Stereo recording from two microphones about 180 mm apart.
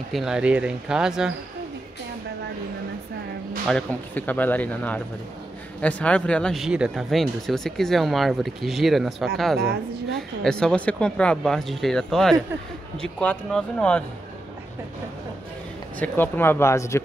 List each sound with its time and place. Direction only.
0.1 s speech: 5° right (ahead or behind)
3.6 s speech: 5° left (ahead or behind)
9.6 s a woman's voice: 60° right (ahead or behind)
10.1 s speech: 5° left (ahead or behind)
16.0 s speech: 10° left (ahead or behind)